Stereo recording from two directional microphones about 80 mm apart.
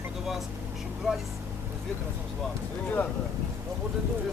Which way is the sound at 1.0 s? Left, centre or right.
Centre.